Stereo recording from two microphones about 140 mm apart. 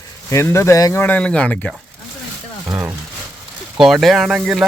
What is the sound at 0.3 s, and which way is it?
Speech, 20° left (ahead or behind).